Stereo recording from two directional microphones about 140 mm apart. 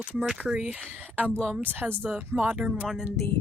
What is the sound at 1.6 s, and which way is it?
Speech, 10° right (ahead or behind).